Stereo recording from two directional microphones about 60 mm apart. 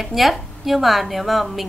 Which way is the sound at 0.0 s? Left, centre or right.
Centre.